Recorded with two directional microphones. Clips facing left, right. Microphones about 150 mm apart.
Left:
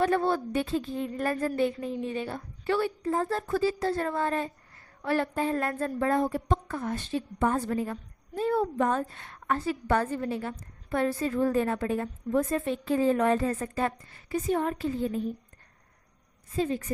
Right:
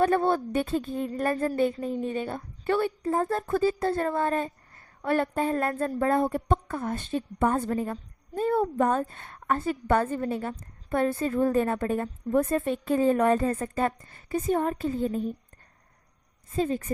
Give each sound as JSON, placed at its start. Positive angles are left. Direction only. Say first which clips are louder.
{"t": 0.0, "sound": "a woman's voice", "louder": "right 2 dB", "side_deg": -50}
{"t": 1.3, "sound": "a woman's voice", "louder": "right 2 dB", "side_deg": -30}
{"t": 1.5, "sound": "a woman's voice", "louder": "right 2 dB", "side_deg": -45}
{"t": 7.7, "sound": "a woman's voice", "louder": "right 1 dB", "side_deg": -35}
{"t": 8.4, "sound": "a woman's voice", "louder": "right 2 dB", "side_deg": -50}
{"t": 16.6, "sound": "a woman's voice", "louder": "right 2 dB", "side_deg": -45}